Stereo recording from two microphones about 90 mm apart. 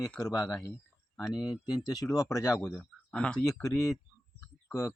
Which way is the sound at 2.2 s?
35° left (ahead or behind).